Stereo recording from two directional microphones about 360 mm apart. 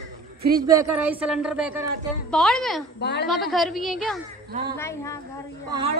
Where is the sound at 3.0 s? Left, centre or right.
Left.